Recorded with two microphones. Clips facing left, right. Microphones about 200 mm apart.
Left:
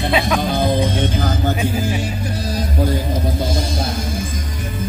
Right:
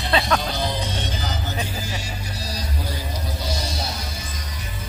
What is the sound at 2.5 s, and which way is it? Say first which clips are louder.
Music: left 12 dB; 50° left (ahead or behind).